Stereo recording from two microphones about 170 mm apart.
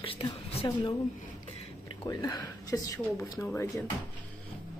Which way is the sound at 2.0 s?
20° left (ahead or behind).